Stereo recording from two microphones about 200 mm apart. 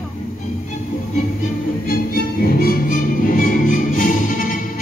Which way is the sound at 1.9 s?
45° left (ahead or behind).